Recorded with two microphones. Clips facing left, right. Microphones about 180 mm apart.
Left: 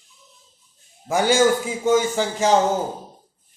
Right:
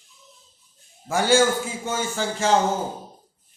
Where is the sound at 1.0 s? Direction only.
15° left (ahead or behind).